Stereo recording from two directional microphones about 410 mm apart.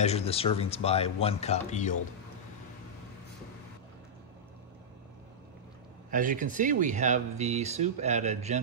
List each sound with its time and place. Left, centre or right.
0.0 s speech: centre
6.0 s speech: centre